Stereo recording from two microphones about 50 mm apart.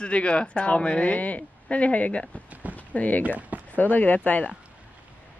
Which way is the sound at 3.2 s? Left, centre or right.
Right.